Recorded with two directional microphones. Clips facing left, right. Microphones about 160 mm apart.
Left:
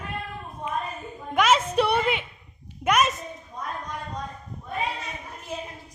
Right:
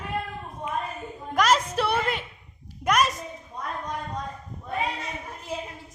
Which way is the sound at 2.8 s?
5° left (ahead or behind).